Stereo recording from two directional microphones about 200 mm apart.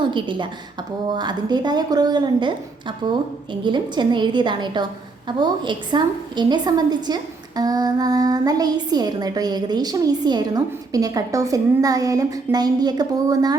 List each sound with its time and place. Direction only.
0.0 s a woman's voice: 25° right (ahead or behind)